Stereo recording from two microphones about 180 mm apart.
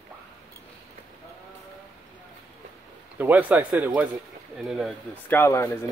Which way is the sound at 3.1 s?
10° right (ahead or behind).